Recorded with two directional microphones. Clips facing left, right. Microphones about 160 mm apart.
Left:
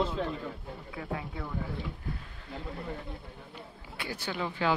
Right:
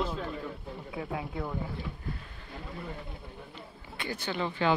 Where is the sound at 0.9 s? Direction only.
15° right (ahead or behind).